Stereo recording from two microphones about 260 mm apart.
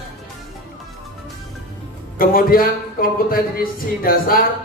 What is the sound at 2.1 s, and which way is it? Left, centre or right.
A man's voice, left.